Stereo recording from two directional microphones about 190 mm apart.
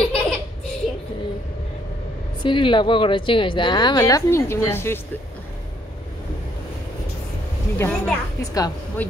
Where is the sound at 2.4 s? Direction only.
25° left (ahead or behind).